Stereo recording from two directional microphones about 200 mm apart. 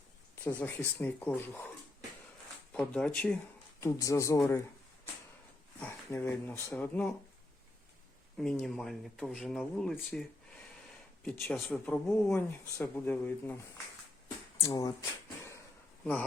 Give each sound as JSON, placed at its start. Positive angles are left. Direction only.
{"t": 0.4, "sound": "speech", "side_deg": 10}
{"t": 2.7, "sound": "speech", "side_deg": 5}
{"t": 5.8, "sound": "speech", "side_deg": 10}
{"t": 8.4, "sound": "speech", "side_deg": 5}
{"t": 11.4, "sound": "speech", "side_deg": 5}
{"t": 14.6, "sound": "speech", "side_deg": 15}